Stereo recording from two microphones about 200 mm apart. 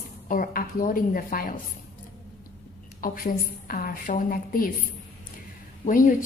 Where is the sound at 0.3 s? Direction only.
45° left (ahead or behind).